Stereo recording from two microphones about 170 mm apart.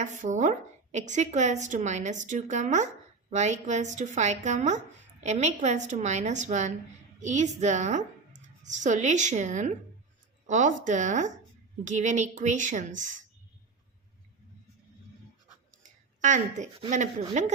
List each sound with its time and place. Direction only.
0.0 s a woman's voice: 45° right (ahead or behind)
16.2 s a woman's voice: 45° right (ahead or behind)